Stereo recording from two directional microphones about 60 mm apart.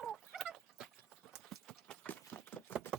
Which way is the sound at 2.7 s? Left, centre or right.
Left.